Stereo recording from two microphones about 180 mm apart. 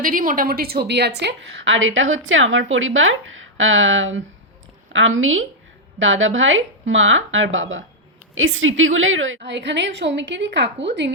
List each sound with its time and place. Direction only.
0.0 s a woman's voice: 50° right (ahead or behind); by 11.1 s 80° right